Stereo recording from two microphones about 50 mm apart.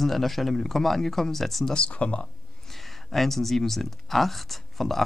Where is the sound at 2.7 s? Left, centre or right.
Centre.